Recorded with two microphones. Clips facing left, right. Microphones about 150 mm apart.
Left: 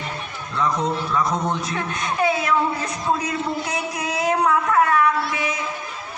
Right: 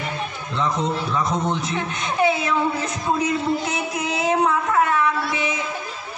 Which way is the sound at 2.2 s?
25° right (ahead or behind).